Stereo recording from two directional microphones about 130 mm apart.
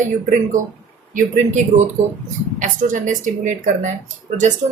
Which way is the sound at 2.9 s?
75° right (ahead or behind).